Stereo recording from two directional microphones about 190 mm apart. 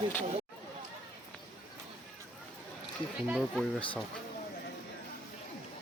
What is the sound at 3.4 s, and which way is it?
Speech, centre (ahead or behind).